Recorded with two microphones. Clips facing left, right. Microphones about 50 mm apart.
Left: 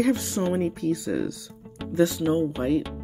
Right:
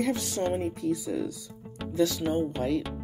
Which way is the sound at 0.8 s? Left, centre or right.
Left.